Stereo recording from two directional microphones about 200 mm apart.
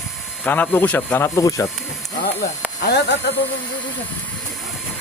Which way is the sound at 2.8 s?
55° left (ahead or behind).